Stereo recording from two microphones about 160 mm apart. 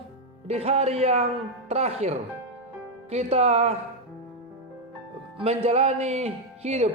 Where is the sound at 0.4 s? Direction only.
40° right (ahead or behind).